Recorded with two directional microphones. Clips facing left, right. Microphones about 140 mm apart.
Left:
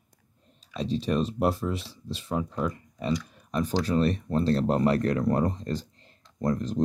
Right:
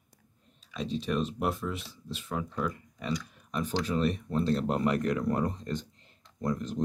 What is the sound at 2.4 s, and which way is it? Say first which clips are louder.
Speech: left 3 dB; 20° left (ahead or behind).